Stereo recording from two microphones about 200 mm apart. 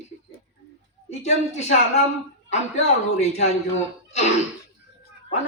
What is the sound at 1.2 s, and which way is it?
Speech, 35° left (ahead or behind).